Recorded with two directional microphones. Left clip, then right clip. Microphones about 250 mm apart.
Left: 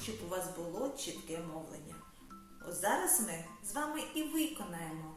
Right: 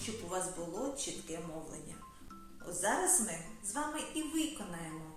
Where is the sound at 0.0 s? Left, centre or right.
Centre.